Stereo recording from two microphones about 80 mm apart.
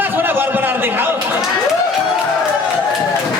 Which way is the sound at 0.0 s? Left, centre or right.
Right.